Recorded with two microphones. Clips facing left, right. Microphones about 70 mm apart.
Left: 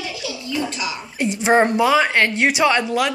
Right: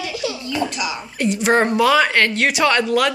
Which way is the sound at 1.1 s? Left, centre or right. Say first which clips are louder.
Left 1 dB; centre.